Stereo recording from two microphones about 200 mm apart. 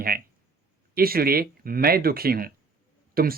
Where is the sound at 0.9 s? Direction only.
50° right (ahead or behind).